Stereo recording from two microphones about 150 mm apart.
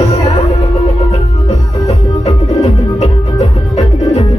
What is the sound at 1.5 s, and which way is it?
Music, 45° left (ahead or behind).